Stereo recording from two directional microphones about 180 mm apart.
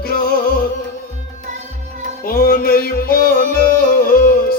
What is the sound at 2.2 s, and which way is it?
Music, 55° left (ahead or behind).